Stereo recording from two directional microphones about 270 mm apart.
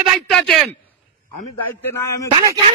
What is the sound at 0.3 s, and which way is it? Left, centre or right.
Speech, centre.